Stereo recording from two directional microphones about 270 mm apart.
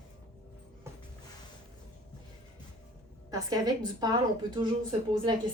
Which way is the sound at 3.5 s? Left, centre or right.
Centre.